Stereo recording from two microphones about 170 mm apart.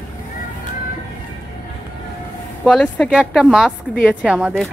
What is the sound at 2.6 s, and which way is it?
Speech, 5° left (ahead or behind).